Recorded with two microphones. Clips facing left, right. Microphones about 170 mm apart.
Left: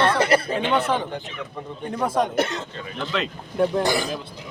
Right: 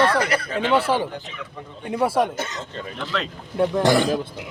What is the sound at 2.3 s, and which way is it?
Speech, 65° left (ahead or behind).